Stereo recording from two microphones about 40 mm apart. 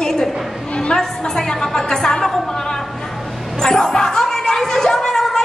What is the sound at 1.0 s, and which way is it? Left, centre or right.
A woman's voice, centre.